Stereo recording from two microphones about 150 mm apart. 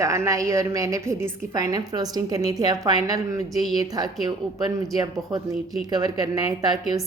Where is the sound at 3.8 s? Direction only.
25° right (ahead or behind).